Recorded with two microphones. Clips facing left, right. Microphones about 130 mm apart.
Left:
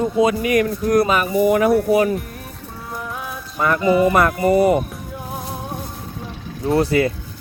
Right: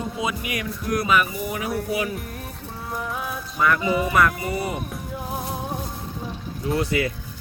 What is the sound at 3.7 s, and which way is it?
Speech, centre (ahead or behind).